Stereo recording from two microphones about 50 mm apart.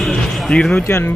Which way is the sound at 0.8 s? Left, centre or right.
Left.